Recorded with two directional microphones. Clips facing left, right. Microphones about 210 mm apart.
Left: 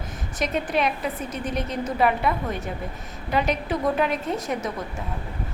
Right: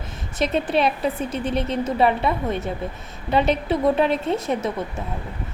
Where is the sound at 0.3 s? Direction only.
30° right (ahead or behind).